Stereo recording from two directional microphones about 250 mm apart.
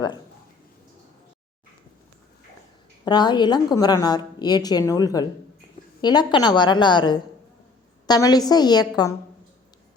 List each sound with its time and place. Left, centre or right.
3.0 s a woman's voice: centre